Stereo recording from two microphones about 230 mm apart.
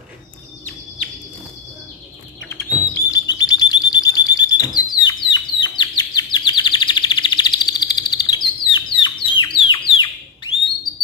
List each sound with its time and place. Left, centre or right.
2.4 s chirp: centre
8.6 s bird: left